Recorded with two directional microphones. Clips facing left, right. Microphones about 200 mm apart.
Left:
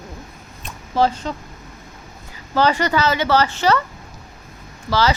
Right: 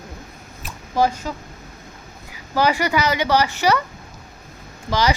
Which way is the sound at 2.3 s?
10° right (ahead or behind).